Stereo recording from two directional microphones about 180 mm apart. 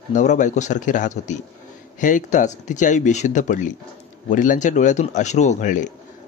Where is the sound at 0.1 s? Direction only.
45° left (ahead or behind).